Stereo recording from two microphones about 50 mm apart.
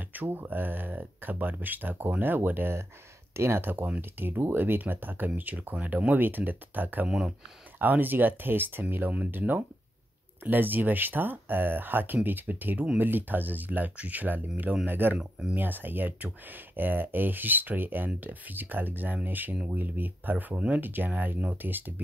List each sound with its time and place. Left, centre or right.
0.1 s speech: right
3.3 s speech: right
7.1 s speech: centre
7.8 s speech: right
10.4 s speech: right